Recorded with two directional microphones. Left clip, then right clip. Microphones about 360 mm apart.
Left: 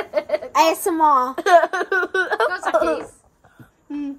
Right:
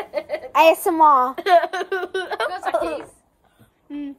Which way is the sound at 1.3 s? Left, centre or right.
Centre.